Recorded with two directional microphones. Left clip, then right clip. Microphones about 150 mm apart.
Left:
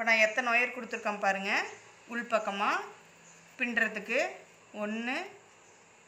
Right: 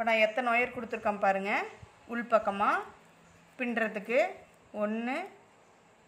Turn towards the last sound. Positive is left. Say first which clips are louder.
# right 2 dB
turn(degrees=-60)  # may be behind; listen again after turning